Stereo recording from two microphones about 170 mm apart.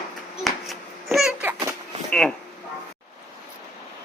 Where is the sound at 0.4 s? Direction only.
Centre (ahead or behind).